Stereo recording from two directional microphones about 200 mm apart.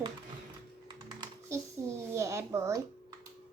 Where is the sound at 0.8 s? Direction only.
20° right (ahead or behind).